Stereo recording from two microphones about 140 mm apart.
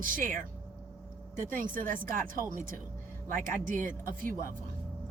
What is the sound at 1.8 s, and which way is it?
Speech, 75° right (ahead or behind).